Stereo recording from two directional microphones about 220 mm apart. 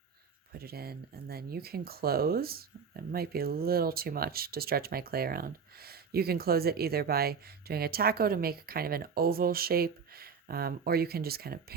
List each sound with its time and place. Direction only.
0.6 s speech: 45° right (ahead or behind)